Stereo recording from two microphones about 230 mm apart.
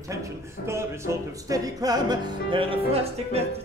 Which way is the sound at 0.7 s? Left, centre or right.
Centre.